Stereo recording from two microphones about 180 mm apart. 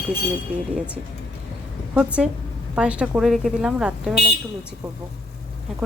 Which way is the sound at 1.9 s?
5° right (ahead or behind).